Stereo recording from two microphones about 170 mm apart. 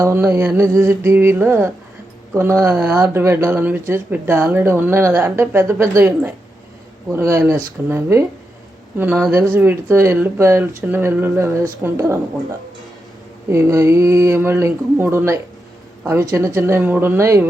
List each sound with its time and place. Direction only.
0.0 s speech: 15° right (ahead or behind)
2.6 s speech: centre (ahead or behind)
3.1 s speech: 15° right (ahead or behind)
9.6 s speech: 15° right (ahead or behind)
16.6 s speech: 15° right (ahead or behind)